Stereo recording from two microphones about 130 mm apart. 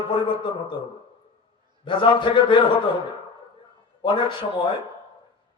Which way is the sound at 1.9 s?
40° left (ahead or behind).